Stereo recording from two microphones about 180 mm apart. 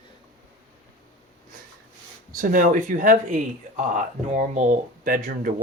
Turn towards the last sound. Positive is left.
turn(degrees=-50)  # may be behind; listen again after turning